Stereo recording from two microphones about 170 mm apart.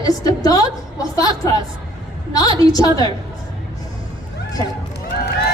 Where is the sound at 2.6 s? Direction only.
20° left (ahead or behind).